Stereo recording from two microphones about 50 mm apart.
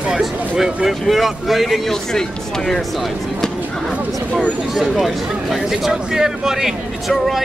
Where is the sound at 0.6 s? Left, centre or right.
Centre.